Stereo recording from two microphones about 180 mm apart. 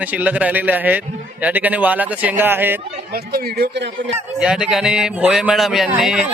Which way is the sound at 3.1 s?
55° right (ahead or behind).